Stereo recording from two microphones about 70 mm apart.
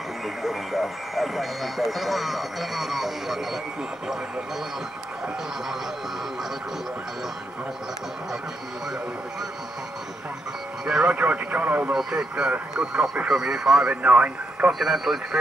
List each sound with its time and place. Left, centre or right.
0.4 s speech: centre
10.9 s speech: centre
11.9 s speech: centre
14.0 s speech: centre
14.7 s speech: centre